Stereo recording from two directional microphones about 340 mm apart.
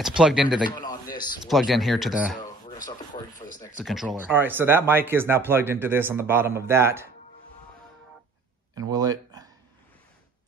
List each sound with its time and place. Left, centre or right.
0.2 s speech: centre
0.7 s a sound: centre
1.4 s speech: centre
3.1 s speech: centre
3.7 s speech: centre
8.9 s a sound: centre